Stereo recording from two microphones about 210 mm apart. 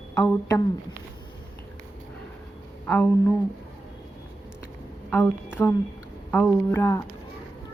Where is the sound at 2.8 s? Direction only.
10° left (ahead or behind).